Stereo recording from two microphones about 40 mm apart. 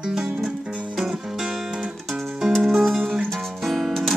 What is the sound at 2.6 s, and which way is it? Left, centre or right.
Music, centre.